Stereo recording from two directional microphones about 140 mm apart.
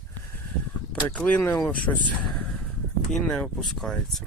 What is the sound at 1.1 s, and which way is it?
Speech, 10° left (ahead or behind).